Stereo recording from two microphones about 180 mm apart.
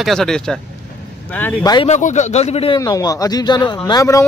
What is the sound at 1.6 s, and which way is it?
Speech, 20° left (ahead or behind).